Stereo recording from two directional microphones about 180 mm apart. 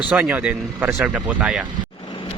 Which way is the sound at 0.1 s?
10° right (ahead or behind).